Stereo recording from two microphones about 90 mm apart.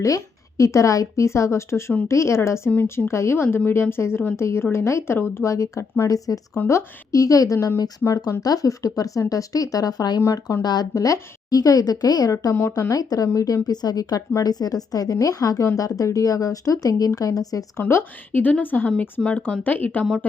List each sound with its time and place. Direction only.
0.0 s speech: 35° left (ahead or behind)
2.6 s a woman's voice: 20° left (ahead or behind)
2.9 s a woman's voice: 30° left (ahead or behind); by 10.2 s 45° left (ahead or behind)
10.2 s speech: 35° left (ahead or behind)
10.6 s a woman's voice: 50° left (ahead or behind)
17.8 s a woman's voice: 25° left (ahead or behind)